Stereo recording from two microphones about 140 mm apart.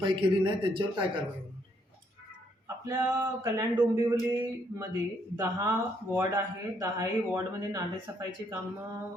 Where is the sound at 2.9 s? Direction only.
25° right (ahead or behind).